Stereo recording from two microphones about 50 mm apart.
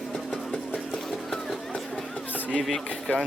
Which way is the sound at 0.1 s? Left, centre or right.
Centre.